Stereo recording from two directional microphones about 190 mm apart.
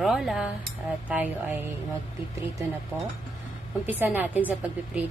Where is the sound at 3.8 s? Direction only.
10° right (ahead or behind).